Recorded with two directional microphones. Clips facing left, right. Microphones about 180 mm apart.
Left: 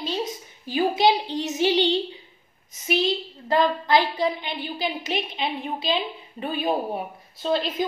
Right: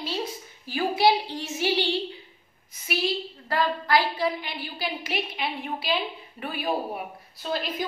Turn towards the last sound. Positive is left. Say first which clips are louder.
# left 5 dB
turn(degrees=25)  # may be behind; listen again after turning